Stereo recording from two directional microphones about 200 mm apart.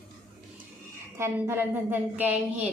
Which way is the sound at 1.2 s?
10° right (ahead or behind).